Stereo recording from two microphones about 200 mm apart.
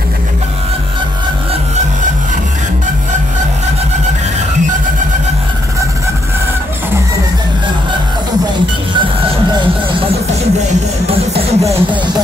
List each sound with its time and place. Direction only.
10.7 s music: 30° right (ahead or behind)